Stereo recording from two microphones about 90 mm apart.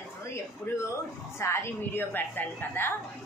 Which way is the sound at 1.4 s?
25° left (ahead or behind).